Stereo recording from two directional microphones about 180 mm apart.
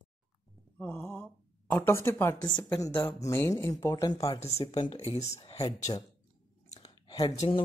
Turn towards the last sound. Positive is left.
turn(degrees=25)  # may be behind; listen again after turning